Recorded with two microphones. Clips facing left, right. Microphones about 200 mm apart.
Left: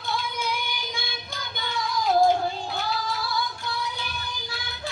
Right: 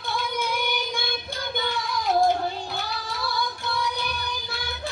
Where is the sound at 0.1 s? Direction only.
55° right (ahead or behind).